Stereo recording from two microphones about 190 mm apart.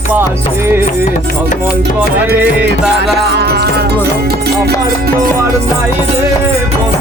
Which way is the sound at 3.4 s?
60° right (ahead or behind).